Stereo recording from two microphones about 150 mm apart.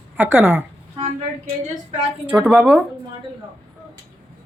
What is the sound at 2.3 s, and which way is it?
Speech, 10° right (ahead or behind).